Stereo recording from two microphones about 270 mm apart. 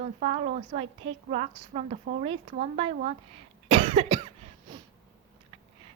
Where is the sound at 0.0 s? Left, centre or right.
Right.